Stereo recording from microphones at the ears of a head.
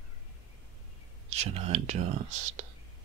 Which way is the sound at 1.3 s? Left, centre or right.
Right.